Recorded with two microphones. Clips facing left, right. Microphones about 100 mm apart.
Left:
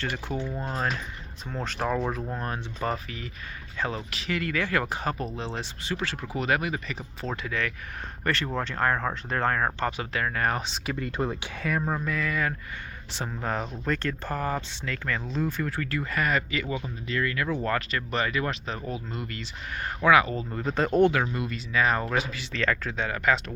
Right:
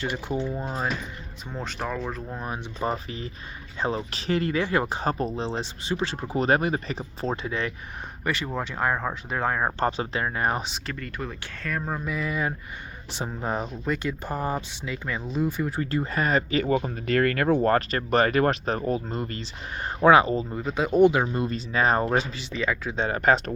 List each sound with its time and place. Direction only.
0.0 s speech: 10° right (ahead or behind); by 2.4 s 5° left (ahead or behind)
2.8 s speech: 20° right (ahead or behind)
6.3 s speech: 35° right (ahead or behind)
8.2 s speech: 5° right (ahead or behind)
9.8 s speech: 30° right (ahead or behind)
10.9 s speech: 25° left (ahead or behind)
11.6 s speech: 5° left (ahead or behind)
12.0 s speech: 15° right (ahead or behind)
20.5 s speech: 5° right (ahead or behind)
21.1 s speech: 25° right (ahead or behind)
22.5 s speech: 10° right (ahead or behind)
23.0 s speech: 35° right (ahead or behind)